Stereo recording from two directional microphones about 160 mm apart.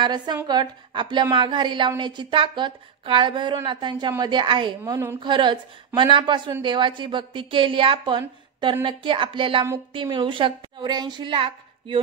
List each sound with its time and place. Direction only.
0.0 s a woman's voice: 25° right (ahead or behind)